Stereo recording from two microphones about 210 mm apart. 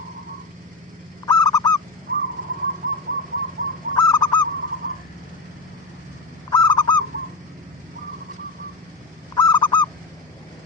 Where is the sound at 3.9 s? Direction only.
20° left (ahead or behind).